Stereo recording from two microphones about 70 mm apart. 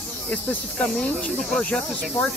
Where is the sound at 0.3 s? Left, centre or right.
Left.